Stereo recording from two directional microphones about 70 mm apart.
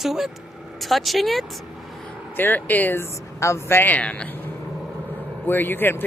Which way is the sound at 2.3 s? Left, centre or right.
Left.